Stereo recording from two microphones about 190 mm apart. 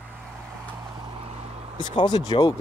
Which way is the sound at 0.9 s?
30° right (ahead or behind).